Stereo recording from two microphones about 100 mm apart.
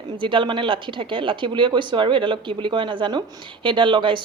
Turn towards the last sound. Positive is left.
turn(degrees=-55)  # may be behind; listen again after turning